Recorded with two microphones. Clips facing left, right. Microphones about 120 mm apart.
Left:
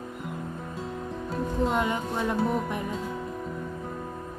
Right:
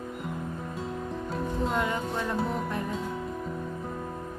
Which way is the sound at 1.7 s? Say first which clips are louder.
Left 2 dB; 20° left (ahead or behind).